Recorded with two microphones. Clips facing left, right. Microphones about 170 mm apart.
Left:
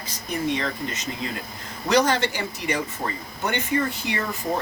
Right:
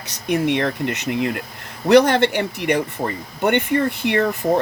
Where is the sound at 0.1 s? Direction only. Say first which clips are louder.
Right 7 dB; 75° right (ahead or behind).